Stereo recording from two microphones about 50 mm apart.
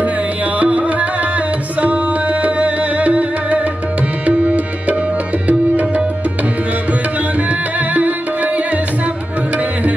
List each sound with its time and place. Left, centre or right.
0.6 s music: right
4.3 s tabla: right
6.9 s music: right